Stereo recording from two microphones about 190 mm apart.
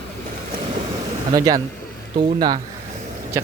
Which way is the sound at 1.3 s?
20° right (ahead or behind).